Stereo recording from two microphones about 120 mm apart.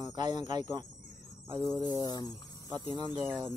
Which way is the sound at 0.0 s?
35° right (ahead or behind).